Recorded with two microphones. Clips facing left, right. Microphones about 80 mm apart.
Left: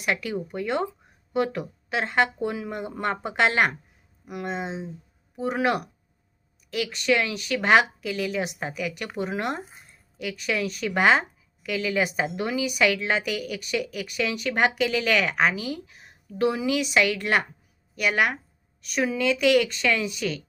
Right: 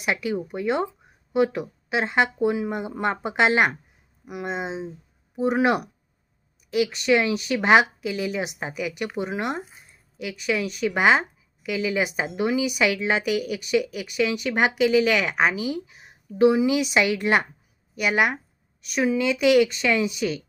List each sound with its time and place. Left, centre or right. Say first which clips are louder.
0.0 s a woman's voice: right 2 dB; centre